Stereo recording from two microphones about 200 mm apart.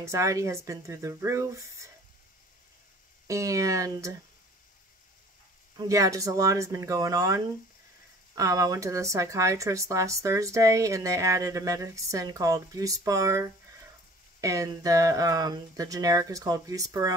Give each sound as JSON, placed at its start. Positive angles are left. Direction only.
{"t": 0.0, "sound": "speech", "side_deg": -15}
{"t": 3.3, "sound": "speech", "side_deg": -15}
{"t": 5.8, "sound": "speech", "side_deg": -15}